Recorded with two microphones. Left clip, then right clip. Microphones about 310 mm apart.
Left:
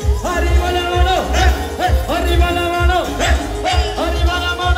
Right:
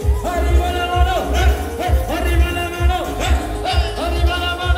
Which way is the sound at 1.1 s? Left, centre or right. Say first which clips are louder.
Left 3 dB; left.